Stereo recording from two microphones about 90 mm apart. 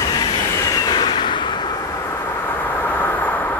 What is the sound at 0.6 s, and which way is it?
Train, 45° left (ahead or behind).